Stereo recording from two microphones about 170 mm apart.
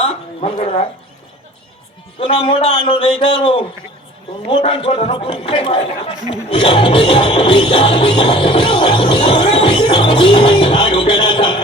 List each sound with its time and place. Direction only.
0.0 s a sound: 35° left (ahead or behind)
2.1 s a man's voice: 30° left (ahead or behind)
6.5 s music: 30° left (ahead or behind)